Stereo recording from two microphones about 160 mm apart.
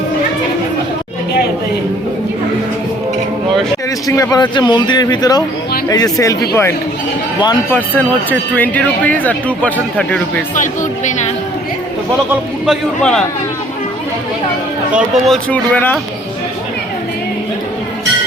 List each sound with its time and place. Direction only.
4.0 s speech: 20° left (ahead or behind)
10.5 s speech: 55° left (ahead or behind)
12.6 s a man's voice: centre (ahead or behind)
14.9 s a man's voice: 5° right (ahead or behind)
15.4 s speech: 10° left (ahead or behind)